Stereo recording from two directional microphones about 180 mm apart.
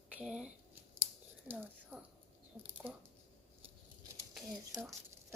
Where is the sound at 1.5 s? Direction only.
10° right (ahead or behind).